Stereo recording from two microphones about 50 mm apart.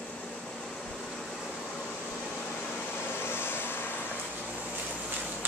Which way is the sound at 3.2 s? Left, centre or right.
Left.